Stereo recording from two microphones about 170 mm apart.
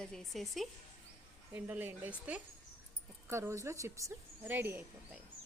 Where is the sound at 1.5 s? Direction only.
10° right (ahead or behind).